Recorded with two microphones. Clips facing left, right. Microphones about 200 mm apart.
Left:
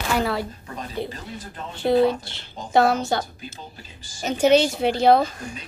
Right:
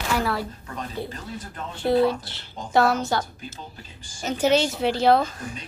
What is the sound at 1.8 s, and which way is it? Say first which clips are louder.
Speech: left 2 dB; 20° left (ahead or behind).